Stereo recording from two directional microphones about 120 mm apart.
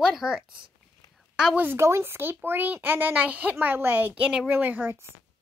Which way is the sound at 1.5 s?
20° right (ahead or behind).